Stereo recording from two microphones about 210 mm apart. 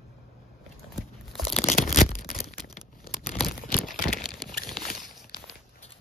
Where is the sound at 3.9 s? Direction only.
40° left (ahead or behind).